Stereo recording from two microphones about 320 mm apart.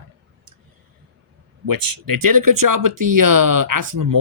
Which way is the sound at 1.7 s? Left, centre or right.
Right.